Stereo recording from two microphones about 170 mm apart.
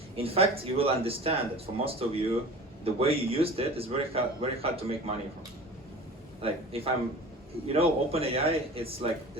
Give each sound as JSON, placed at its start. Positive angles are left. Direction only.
{"t": 0.2, "sound": "a man's voice", "side_deg": -35}
{"t": 6.4, "sound": "a man's voice", "side_deg": -35}